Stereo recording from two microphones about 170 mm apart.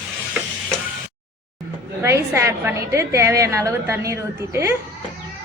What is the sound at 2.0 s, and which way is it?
A woman's voice, 15° right (ahead or behind).